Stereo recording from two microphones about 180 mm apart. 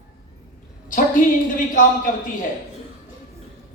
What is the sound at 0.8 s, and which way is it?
A woman's voice, 45° left (ahead or behind).